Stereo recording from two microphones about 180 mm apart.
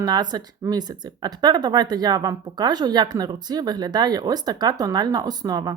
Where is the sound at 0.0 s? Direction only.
25° right (ahead or behind).